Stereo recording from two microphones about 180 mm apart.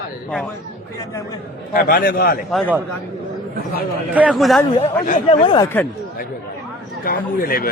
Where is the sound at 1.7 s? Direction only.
55° left (ahead or behind).